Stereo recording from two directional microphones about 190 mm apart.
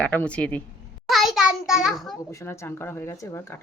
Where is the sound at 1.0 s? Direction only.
Centre (ahead or behind).